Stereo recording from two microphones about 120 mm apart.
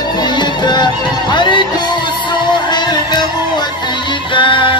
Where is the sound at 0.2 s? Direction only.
40° left (ahead or behind).